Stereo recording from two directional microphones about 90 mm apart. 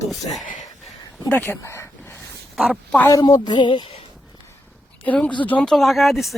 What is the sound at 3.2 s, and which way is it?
Speech, 55° left (ahead or behind).